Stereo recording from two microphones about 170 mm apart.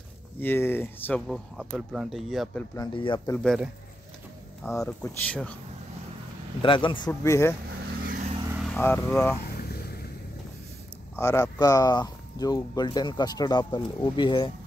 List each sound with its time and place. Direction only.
0.4 s speech: 10° left (ahead or behind)
2.7 s speech: 25° left (ahead or behind)
3.4 s speech: 5° right (ahead or behind)
4.6 s speech: 15° left (ahead or behind)
6.6 s speech: 30° left (ahead or behind)
7.1 s speech: 15° left (ahead or behind)
8.1 s vehicle: 45° right (ahead or behind)
8.7 s speech: 10° left (ahead or behind)
9.6 s vehicle: 65° left (ahead or behind)
11.1 s speech: 15° left (ahead or behind)